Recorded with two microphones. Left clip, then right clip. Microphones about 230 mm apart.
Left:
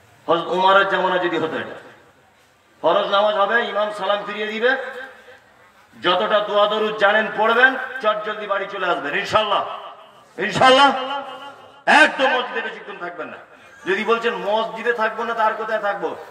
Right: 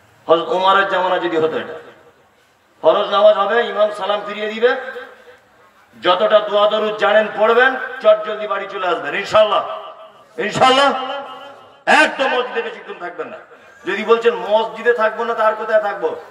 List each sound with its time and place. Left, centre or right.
0.3 s a man's voice: right
2.8 s a man's voice: right
5.9 s a man's voice: right
13.8 s a man's voice: right